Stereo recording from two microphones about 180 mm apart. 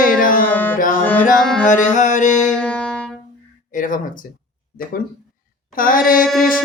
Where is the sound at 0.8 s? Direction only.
50° left (ahead or behind).